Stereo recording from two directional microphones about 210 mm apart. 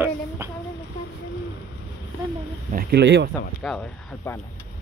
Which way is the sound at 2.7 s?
45° right (ahead or behind).